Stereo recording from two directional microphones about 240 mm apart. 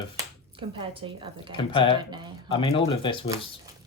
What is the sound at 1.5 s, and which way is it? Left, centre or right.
Speech, left.